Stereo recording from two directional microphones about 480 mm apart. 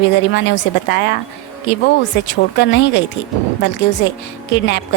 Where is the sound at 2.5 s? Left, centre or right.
Left.